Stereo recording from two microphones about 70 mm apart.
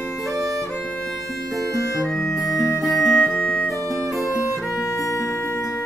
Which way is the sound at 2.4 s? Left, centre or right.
Centre.